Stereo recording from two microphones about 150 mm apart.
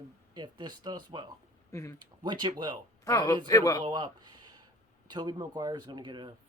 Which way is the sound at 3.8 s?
30° right (ahead or behind).